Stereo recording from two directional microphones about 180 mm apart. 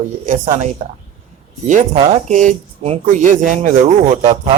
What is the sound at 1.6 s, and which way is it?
Speech, 40° right (ahead or behind).